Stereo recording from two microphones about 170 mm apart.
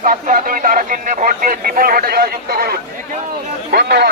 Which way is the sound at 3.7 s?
70° right (ahead or behind).